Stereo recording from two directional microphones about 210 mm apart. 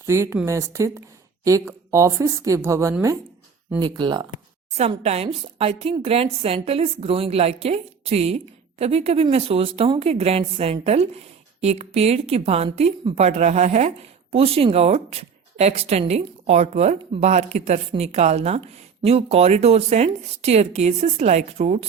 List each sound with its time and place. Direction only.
0.0 s a woman's voice: 15° right (ahead or behind)
4.7 s a woman's voice: 30° right (ahead or behind)